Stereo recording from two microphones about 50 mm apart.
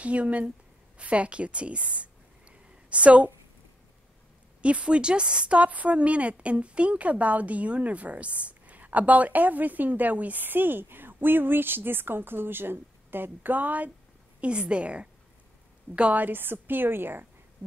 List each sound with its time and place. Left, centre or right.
0.0 s a woman's voice: right
4.6 s a woman's voice: right
16.2 s a woman's voice: right